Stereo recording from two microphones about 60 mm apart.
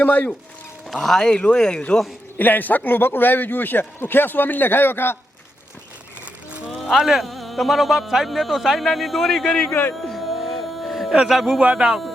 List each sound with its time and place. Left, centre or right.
0.0 s speech: left
1.0 s speech: centre
2.4 s speech: left
6.9 s speech: centre
10.1 s music: centre
11.3 s speech: centre
11.6 s speech: centre